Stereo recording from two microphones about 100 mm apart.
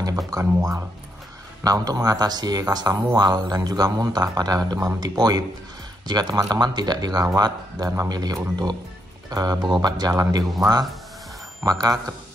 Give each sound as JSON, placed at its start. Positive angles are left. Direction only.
{"t": 0.3, "sound": "speech", "side_deg": -35}